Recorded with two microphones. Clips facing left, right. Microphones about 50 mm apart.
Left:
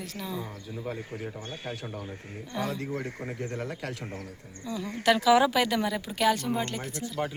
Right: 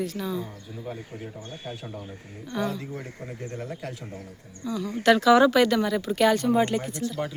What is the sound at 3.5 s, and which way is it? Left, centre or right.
Speech, left.